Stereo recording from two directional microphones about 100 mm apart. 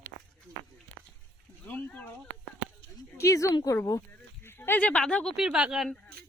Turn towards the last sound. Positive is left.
turn(degrees=15)  # may be behind; listen again after turning